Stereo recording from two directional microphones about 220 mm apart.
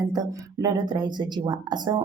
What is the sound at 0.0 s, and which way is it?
A woman's voice, 15° right (ahead or behind).